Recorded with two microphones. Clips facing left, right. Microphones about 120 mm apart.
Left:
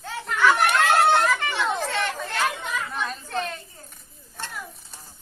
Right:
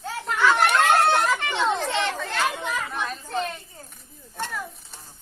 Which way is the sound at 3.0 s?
5° right (ahead or behind).